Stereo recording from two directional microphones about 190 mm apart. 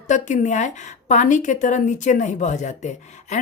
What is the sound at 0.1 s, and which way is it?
A woman's voice, 40° left (ahead or behind).